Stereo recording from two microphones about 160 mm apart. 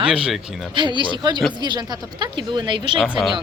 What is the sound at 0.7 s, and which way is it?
Speech, 30° right (ahead or behind).